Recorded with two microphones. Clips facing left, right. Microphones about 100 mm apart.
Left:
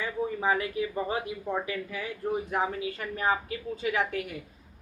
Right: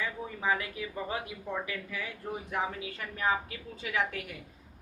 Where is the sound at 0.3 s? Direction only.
35° left (ahead or behind).